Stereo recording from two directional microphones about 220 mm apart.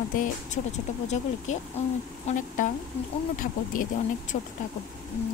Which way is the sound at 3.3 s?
40° left (ahead or behind).